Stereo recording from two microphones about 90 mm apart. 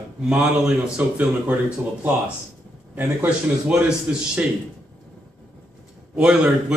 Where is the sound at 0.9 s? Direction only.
15° right (ahead or behind).